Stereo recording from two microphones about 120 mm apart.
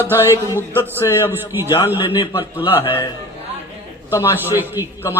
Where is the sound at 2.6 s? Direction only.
15° right (ahead or behind).